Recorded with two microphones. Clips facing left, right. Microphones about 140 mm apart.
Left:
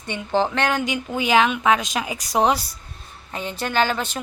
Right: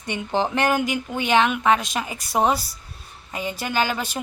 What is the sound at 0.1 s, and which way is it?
Speech, 15° right (ahead or behind).